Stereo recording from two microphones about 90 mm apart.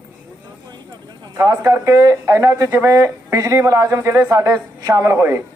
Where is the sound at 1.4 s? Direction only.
45° right (ahead or behind).